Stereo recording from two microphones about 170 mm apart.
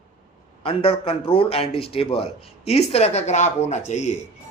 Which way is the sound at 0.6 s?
35° left (ahead or behind).